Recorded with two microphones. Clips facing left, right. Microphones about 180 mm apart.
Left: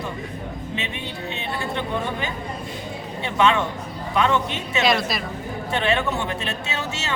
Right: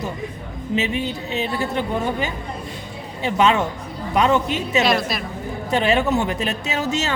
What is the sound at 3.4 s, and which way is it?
A woman's voice, 35° right (ahead or behind).